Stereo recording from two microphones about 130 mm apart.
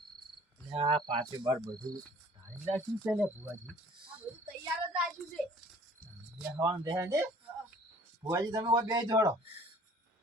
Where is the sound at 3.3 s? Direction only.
20° right (ahead or behind).